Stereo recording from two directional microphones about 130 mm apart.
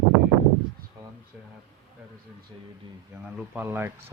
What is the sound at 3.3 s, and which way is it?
Speech, 15° right (ahead or behind).